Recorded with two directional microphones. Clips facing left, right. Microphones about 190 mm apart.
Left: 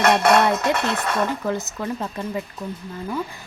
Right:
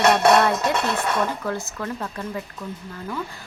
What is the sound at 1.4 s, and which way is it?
Speech, 20° left (ahead or behind).